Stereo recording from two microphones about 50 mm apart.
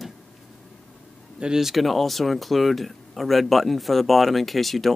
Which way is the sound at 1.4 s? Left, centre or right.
Centre.